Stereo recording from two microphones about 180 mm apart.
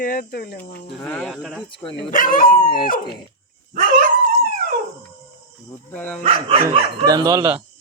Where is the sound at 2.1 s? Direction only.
50° left (ahead or behind).